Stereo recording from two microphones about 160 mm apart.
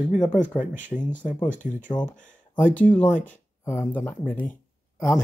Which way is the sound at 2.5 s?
10° left (ahead or behind).